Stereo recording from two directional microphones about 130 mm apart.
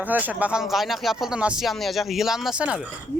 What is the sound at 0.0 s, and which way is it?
Speech, 10° right (ahead or behind).